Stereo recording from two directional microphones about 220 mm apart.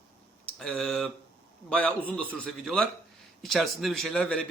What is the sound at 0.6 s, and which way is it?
A man's voice, 5° left (ahead or behind).